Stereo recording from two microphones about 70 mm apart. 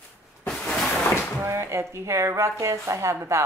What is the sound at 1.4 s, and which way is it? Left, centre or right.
Speech, right.